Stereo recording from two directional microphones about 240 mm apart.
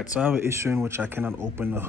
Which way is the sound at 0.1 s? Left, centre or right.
Centre.